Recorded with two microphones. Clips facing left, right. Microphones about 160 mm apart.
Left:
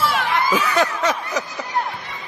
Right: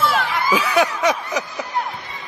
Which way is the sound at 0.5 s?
10° right (ahead or behind).